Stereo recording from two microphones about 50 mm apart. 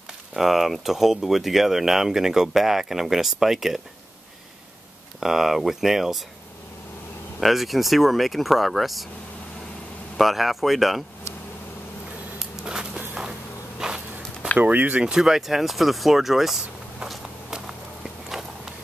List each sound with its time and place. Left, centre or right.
0.3 s speech: centre
5.2 s speech: centre
7.3 s speech: centre
10.1 s speech: centre
12.6 s a sound: centre
13.7 s insect: centre
14.6 s speech: right
15.0 s speech: centre